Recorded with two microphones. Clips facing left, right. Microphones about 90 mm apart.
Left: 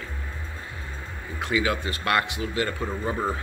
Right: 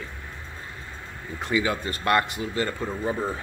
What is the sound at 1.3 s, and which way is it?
Speech, 5° left (ahead or behind).